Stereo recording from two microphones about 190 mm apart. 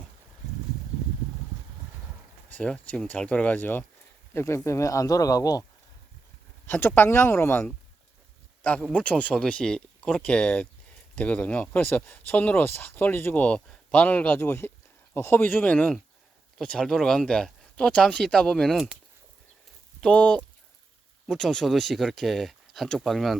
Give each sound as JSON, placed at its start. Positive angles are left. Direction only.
{"t": 2.5, "sound": "speech", "side_deg": 5}
{"t": 6.7, "sound": "speech", "side_deg": 10}
{"t": 20.0, "sound": "speech", "side_deg": 5}